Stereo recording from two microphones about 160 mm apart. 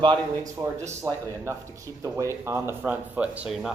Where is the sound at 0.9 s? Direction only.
15° right (ahead or behind).